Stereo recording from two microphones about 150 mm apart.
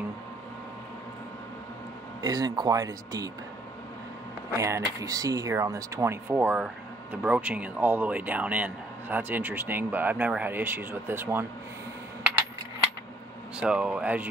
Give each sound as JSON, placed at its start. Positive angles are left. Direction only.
{"t": 2.2, "sound": "speech", "side_deg": -25}
{"t": 4.6, "sound": "speech", "side_deg": -20}
{"t": 13.6, "sound": "speech", "side_deg": -5}